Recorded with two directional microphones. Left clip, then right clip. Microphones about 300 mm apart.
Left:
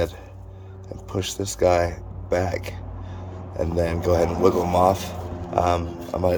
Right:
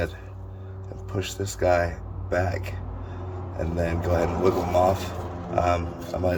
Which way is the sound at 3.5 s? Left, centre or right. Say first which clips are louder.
Left 4 dB; left.